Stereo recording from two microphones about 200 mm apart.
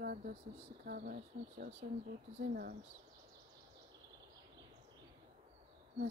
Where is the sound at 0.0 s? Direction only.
50° right (ahead or behind).